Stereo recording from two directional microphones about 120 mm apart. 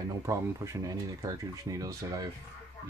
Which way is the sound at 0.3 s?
25° right (ahead or behind).